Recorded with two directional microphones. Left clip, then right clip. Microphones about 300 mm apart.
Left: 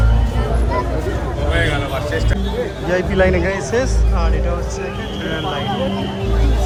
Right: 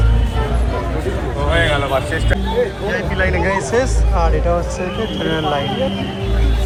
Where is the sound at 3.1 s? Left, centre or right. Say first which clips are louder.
Left 1 dB; centre.